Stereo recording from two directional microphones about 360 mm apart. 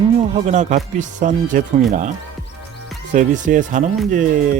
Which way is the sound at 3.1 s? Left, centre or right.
Right.